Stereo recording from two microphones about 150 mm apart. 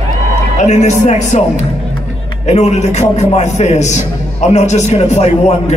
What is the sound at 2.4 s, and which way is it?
A man's voice, 45° left (ahead or behind).